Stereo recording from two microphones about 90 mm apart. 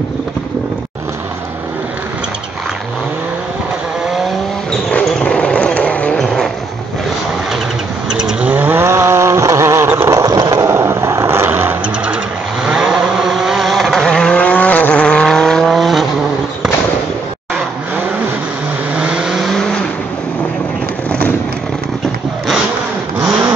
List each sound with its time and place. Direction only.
5.2 s vehicle: 10° left (ahead or behind)
6.2 s vehicle: centre (ahead or behind)
8.2 s vehicle: 10° right (ahead or behind)
8.8 s vehicle: 30° right (ahead or behind)
12.6 s vehicle: 5° right (ahead or behind)
18.9 s vehicle: 10° right (ahead or behind)